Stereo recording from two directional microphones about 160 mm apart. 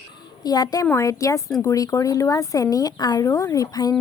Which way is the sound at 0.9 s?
20° left (ahead or behind).